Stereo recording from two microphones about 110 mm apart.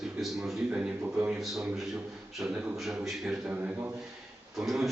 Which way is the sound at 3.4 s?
15° right (ahead or behind).